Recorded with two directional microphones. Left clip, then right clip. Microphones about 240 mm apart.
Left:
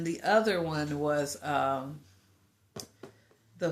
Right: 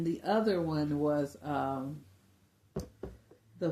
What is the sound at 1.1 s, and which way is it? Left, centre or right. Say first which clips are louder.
Speech: left 3 dB; centre.